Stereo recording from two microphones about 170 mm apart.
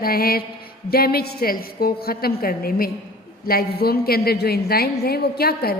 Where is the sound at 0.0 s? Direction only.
60° left (ahead or behind).